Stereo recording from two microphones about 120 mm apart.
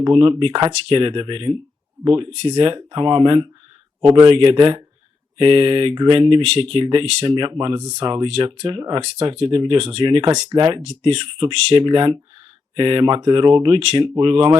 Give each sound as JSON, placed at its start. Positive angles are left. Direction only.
{"t": 0.0, "sound": "speech", "side_deg": -40}
{"t": 2.0, "sound": "speech", "side_deg": -35}
{"t": 2.3, "sound": "speech", "side_deg": -45}
{"t": 7.6, "sound": "speech", "side_deg": -30}
{"t": 9.0, "sound": "speech", "side_deg": -55}
{"t": 9.4, "sound": "speech", "side_deg": -45}